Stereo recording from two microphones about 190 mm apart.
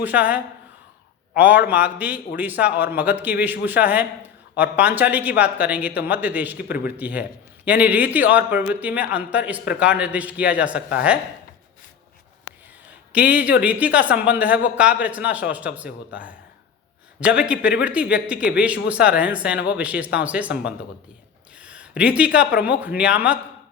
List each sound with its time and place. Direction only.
0.0 s a man's voice: 10° right (ahead or behind)
13.1 s a man's voice: 10° right (ahead or behind)
21.6 s a sound: 5° right (ahead or behind)
22.6 s a man's voice: 10° right (ahead or behind)